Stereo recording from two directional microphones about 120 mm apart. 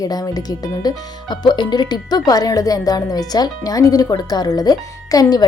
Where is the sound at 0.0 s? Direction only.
30° left (ahead or behind).